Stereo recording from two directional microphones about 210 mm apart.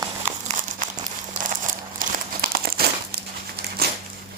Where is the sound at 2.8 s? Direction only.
50° right (ahead or behind).